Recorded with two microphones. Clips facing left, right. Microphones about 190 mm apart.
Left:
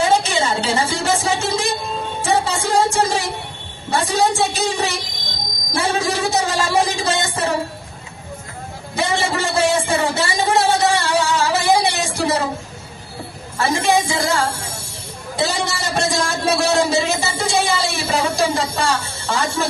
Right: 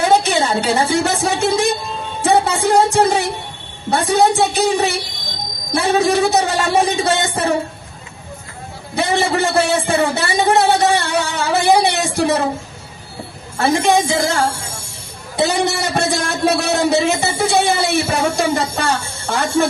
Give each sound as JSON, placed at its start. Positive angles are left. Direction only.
{"t": 0.0, "sound": "a woman's voice", "side_deg": -60}
{"t": 2.2, "sound": "music", "side_deg": -60}
{"t": 3.8, "sound": "speech", "side_deg": -60}
{"t": 9.0, "sound": "a man's voice", "side_deg": -60}
{"t": 13.6, "sound": "speech", "side_deg": -60}
{"t": 15.4, "sound": "a man's voice", "side_deg": -60}